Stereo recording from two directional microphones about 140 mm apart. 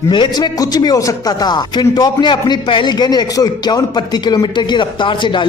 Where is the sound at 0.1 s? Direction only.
30° left (ahead or behind).